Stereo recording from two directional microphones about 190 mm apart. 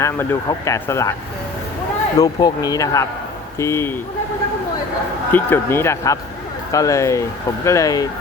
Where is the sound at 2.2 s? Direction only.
20° left (ahead or behind).